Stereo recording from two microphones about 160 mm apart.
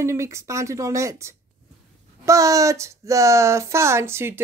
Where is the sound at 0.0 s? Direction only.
20° right (ahead or behind).